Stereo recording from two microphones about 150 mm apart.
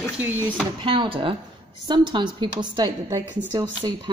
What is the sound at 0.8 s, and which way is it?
A woman's voice, 35° right (ahead or behind).